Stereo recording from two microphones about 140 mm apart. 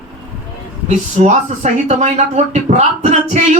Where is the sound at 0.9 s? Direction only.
60° right (ahead or behind).